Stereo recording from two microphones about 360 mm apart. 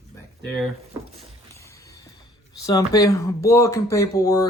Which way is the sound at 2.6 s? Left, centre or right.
Centre.